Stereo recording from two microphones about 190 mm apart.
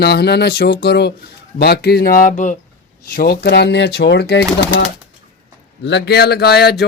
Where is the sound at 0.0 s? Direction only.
60° left (ahead or behind); by 2.6 s 40° left (ahead or behind).